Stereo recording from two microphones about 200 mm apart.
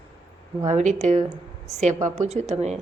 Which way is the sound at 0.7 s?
35° right (ahead or behind).